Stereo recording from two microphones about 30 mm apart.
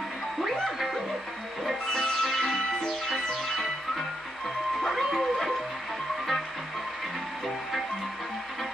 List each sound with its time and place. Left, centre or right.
0.4 s music: centre